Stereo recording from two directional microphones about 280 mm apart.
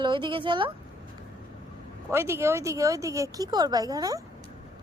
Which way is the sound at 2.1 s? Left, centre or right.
Centre.